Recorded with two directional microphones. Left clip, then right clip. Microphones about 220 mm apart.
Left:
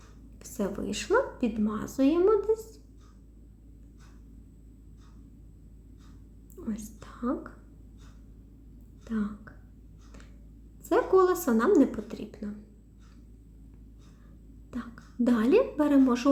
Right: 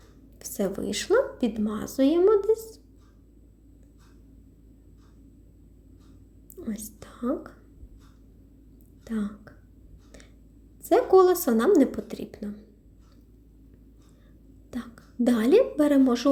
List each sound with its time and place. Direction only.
0.3 s a woman's voice: 20° right (ahead or behind)
6.6 s whispering: 20° right (ahead or behind)
9.0 s speech: 20° right (ahead or behind)
10.8 s a woman's voice: 20° right (ahead or behind)
14.7 s a woman's voice: 20° right (ahead or behind)